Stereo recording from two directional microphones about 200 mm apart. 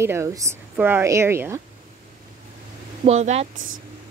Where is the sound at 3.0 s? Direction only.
35° right (ahead or behind).